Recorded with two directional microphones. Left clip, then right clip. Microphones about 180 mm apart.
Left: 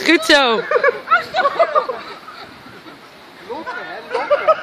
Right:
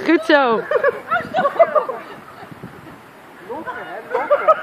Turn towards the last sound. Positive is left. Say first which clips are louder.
# even
turn(degrees=10)  # may be behind; listen again after turning